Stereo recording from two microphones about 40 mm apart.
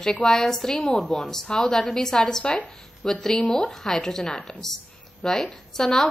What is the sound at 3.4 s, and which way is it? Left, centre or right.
A woman's voice, centre.